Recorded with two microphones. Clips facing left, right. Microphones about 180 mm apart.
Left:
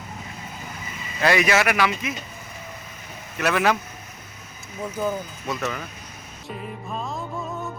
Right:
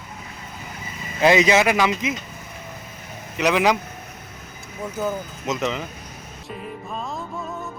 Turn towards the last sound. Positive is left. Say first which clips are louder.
# even
turn(degrees=0)  # may be behind; listen again after turning